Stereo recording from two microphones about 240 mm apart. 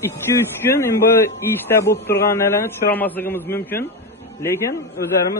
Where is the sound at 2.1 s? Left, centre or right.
Centre.